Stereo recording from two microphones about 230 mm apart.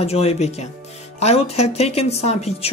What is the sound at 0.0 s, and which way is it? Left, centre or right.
Speech, left.